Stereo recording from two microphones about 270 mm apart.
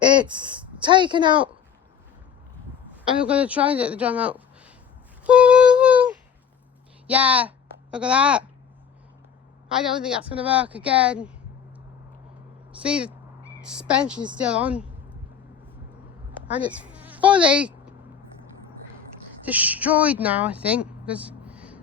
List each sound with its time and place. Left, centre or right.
0.0 s speech: centre
3.2 s speech: centre
5.2 s female singing: centre
7.1 s speech: centre
9.7 s speech: centre
12.8 s speech: centre
16.5 s speech: centre
19.5 s speech: centre